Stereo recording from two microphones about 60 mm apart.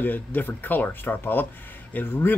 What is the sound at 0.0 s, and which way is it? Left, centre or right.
Speech, left.